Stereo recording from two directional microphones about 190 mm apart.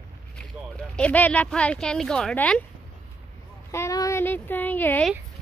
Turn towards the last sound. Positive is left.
turn(degrees=10)  # may be behind; listen again after turning